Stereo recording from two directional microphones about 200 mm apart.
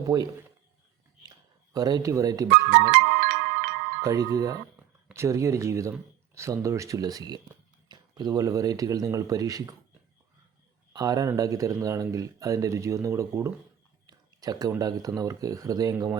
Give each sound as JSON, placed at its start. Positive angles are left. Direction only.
{"t": 0.1, "sound": "speech", "side_deg": -20}
{"t": 1.7, "sound": "speech", "side_deg": -20}
{"t": 2.5, "sound": "music", "side_deg": -50}
{"t": 4.0, "sound": "speech", "side_deg": -15}
{"t": 10.9, "sound": "speech", "side_deg": -20}